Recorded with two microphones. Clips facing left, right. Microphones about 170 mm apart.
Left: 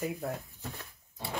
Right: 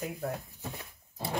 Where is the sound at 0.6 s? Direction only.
15° right (ahead or behind).